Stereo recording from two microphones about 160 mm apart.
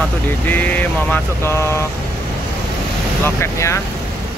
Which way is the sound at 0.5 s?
10° left (ahead or behind).